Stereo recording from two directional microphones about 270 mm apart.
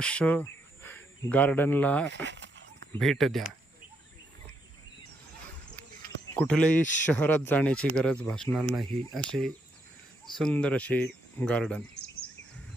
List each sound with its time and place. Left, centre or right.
0.0 s speech: centre
2.0 s speech: right
2.9 s speech: centre
6.3 s speech: centre